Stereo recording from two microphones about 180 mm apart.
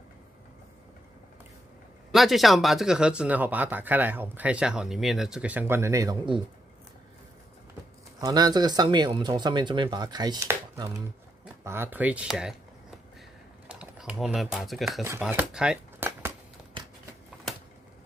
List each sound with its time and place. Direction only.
2.1 s speech: centre (ahead or behind); by 6.4 s 25° right (ahead or behind)
8.2 s speech: 20° right (ahead or behind); by 12.5 s 5° right (ahead or behind)
13.7 s speech: 5° right (ahead or behind)
15.0 s shuffling cards: 10° right (ahead or behind)